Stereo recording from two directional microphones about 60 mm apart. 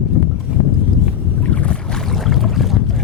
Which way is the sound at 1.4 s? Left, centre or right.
Left.